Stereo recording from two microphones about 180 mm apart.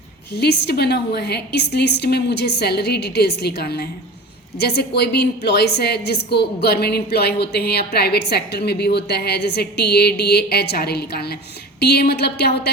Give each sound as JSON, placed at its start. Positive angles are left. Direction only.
{"t": 0.3, "sound": "a woman's voice", "side_deg": 65}